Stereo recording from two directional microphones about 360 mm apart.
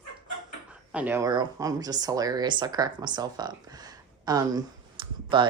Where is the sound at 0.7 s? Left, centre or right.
Centre.